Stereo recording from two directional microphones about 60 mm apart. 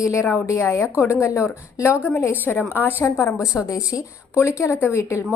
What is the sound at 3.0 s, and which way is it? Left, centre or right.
Speech, left.